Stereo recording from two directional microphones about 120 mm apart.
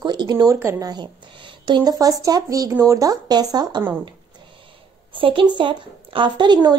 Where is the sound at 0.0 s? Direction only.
35° right (ahead or behind).